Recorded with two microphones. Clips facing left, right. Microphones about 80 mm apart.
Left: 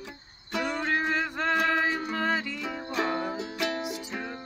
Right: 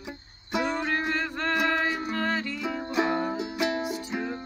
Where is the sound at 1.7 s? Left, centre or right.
Centre.